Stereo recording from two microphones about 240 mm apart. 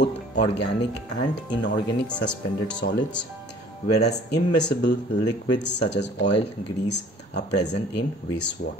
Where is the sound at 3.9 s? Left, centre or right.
Left.